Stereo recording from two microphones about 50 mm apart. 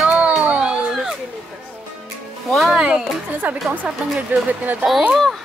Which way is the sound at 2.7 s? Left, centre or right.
Centre.